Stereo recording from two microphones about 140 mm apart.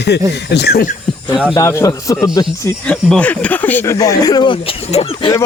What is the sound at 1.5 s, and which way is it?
Speech, 20° left (ahead or behind).